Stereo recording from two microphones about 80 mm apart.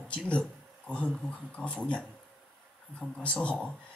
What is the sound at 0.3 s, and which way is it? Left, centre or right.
Speech, centre.